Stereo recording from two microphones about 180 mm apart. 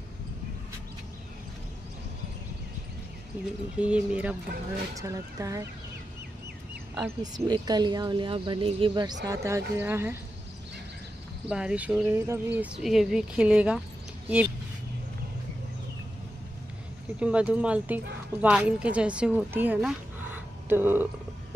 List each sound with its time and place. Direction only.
3.7 s speech: 5° right (ahead or behind)
4.9 s speech: 20° right (ahead or behind)
7.0 s speech: 20° right (ahead or behind)
11.4 s speech: 5° right (ahead or behind)
17.2 s speech: 5° right (ahead or behind)